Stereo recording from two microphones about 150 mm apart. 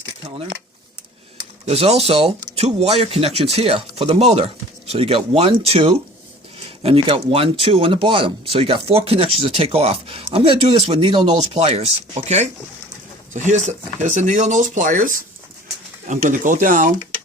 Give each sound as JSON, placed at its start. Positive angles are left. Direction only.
{"t": 1.6, "sound": "speech", "side_deg": -45}